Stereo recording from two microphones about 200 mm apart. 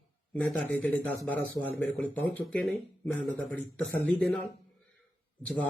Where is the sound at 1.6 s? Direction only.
15° left (ahead or behind).